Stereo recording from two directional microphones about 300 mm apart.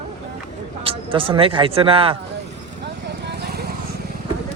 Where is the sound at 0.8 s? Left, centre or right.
Centre.